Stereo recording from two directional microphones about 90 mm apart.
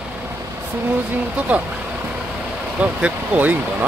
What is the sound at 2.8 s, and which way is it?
Speech, 15° right (ahead or behind).